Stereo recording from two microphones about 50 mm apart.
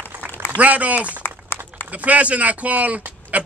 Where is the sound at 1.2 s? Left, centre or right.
Left.